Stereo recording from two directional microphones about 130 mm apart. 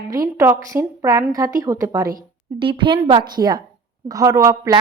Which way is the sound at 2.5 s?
40° right (ahead or behind).